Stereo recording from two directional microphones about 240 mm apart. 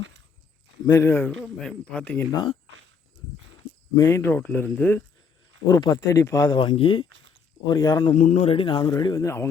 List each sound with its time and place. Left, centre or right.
0.9 s speech: centre
3.9 s speech: centre
8.1 s speech: left; by 9.5 s centre